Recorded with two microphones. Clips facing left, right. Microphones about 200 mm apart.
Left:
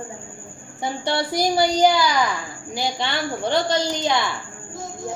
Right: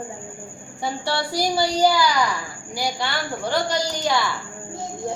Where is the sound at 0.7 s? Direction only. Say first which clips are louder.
Left 2 dB; 20° left (ahead or behind).